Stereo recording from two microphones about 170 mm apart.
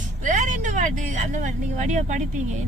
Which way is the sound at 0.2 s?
50° right (ahead or behind).